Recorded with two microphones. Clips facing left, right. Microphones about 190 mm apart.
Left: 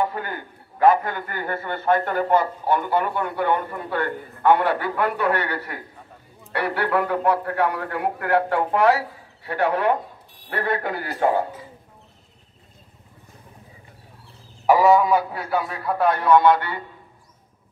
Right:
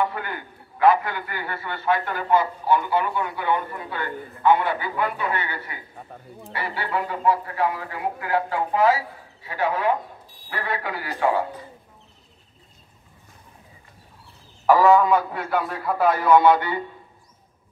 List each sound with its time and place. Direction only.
0.0 s a man's voice: 40° left (ahead or behind)
14.7 s a man's voice: 10° left (ahead or behind); by 16.8 s 10° right (ahead or behind)